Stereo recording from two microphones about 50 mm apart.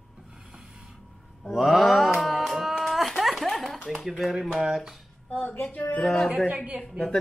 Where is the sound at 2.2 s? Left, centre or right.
Centre.